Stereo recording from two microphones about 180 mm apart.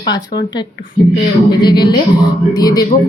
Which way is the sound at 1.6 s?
25° left (ahead or behind).